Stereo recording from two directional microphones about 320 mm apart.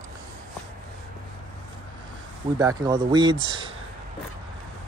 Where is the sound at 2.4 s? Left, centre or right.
Centre.